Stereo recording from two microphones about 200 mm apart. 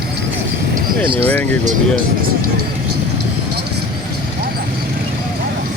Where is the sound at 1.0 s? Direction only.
25° right (ahead or behind).